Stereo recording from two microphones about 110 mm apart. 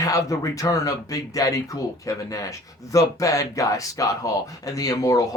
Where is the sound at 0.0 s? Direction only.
30° left (ahead or behind).